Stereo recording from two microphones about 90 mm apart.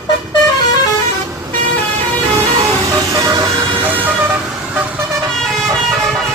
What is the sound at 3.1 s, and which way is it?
Vehicle, 40° right (ahead or behind).